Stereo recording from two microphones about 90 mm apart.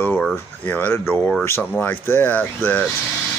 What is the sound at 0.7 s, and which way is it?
Speech, 25° left (ahead or behind).